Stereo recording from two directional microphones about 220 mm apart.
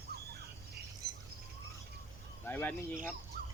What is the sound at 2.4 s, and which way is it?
Speech, 10° left (ahead or behind).